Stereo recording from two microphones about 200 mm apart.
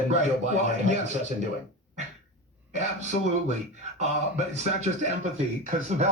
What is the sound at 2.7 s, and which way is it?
Speech, 35° right (ahead or behind).